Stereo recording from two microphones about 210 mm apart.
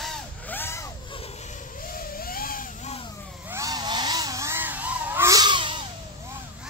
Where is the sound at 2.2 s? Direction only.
45° left (ahead or behind).